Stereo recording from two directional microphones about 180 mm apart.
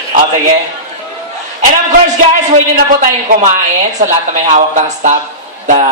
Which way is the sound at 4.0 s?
40° right (ahead or behind).